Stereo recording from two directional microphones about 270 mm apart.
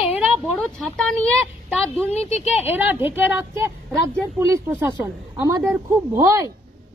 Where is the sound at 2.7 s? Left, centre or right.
Centre.